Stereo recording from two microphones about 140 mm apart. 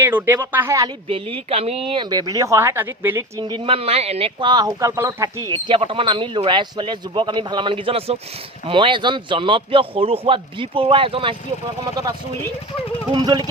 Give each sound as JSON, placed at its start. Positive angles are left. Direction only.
{"t": 0.0, "sound": "speech", "side_deg": -15}
{"t": 1.0, "sound": "speech", "side_deg": -45}
{"t": 1.9, "sound": "a woman's voice", "side_deg": -30}
{"t": 13.1, "sound": "speech", "side_deg": -30}